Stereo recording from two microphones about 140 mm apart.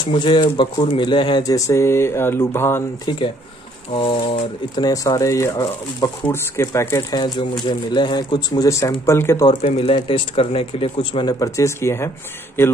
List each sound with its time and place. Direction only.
0.0 s speech: 35° left (ahead or behind); by 2.8 s 15° left (ahead or behind)
3.1 s speech: 30° left (ahead or behind)
4.8 s speech: 25° left (ahead or behind)
7.6 s speech: 35° left (ahead or behind)
9.5 s speech: 50° left (ahead or behind); by 12.7 s 15° left (ahead or behind)